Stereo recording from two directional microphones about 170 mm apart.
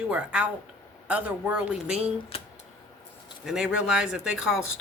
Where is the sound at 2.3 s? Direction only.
35° left (ahead or behind).